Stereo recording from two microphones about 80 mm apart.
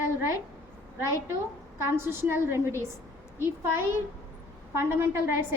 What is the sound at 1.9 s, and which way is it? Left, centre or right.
A woman's voice, right.